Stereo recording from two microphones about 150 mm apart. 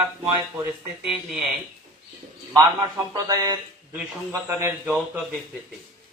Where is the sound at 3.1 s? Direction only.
25° right (ahead or behind).